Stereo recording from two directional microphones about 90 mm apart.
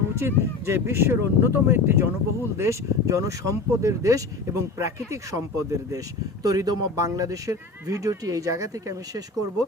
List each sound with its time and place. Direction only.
0.2 s speech: 30° right (ahead or behind)